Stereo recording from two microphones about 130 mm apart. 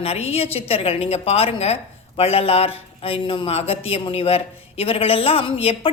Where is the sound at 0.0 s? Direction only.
50° left (ahead or behind).